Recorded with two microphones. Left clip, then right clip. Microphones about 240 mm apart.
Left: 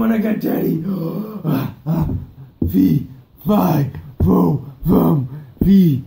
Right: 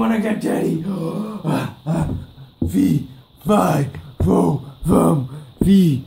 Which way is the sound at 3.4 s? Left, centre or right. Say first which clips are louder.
Right 1 dB; centre.